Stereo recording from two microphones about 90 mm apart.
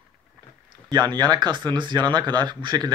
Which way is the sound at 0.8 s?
50° right (ahead or behind).